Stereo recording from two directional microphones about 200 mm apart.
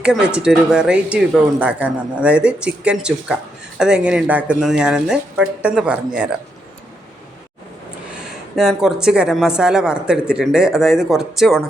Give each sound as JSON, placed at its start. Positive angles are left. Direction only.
{"t": 0.0, "sound": "a woman's voice", "side_deg": -5}
{"t": 8.5, "sound": "a woman's voice", "side_deg": 0}